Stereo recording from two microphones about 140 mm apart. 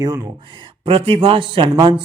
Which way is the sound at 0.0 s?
25° right (ahead or behind).